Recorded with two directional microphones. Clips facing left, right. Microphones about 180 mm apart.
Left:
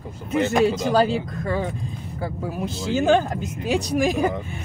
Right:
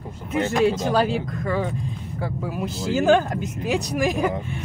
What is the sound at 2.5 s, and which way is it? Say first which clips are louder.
Speech: even; 5° right (ahead or behind).